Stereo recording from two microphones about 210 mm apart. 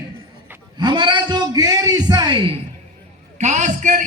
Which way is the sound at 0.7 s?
20° right (ahead or behind).